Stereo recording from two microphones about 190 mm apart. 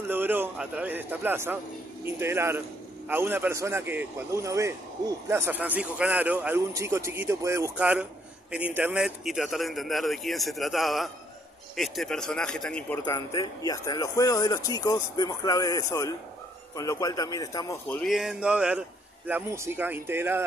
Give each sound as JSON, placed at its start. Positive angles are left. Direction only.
{"t": 0.1, "sound": "a man's voice", "side_deg": -10}
{"t": 13.0, "sound": "speech", "side_deg": 20}